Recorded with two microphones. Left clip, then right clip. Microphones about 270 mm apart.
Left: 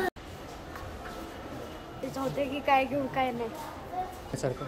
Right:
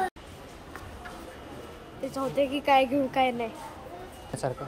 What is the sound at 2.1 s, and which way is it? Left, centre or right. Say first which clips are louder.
A woman's voice: right 5 dB; right.